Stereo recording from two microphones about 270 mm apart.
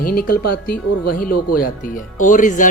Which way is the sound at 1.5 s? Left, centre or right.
Left.